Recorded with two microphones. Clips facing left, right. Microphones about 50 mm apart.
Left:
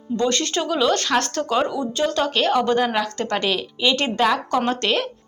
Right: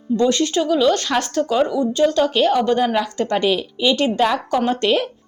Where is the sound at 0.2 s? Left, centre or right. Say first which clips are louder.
Right 4 dB; centre.